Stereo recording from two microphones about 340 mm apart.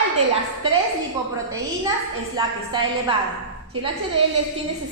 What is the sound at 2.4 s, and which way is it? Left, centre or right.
Speech, centre.